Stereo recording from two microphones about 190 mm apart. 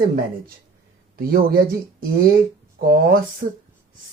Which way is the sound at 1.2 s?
50° right (ahead or behind).